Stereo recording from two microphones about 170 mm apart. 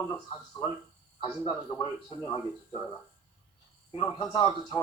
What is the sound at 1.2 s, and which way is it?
Speech, 30° left (ahead or behind).